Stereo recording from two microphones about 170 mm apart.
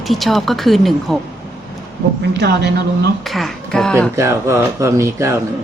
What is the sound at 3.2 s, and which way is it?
Speech, centre (ahead or behind).